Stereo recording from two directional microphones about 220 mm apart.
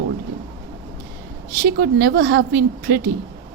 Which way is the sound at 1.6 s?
45° right (ahead or behind).